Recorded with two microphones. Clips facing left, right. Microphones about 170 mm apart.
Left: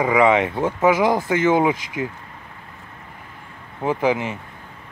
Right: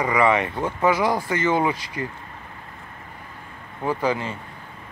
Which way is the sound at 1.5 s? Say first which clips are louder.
Left 3 dB; 15° left (ahead or behind).